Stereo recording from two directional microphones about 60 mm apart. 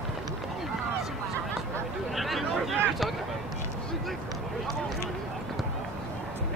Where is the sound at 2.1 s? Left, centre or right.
Centre.